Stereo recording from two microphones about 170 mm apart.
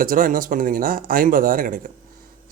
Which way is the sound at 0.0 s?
55° right (ahead or behind).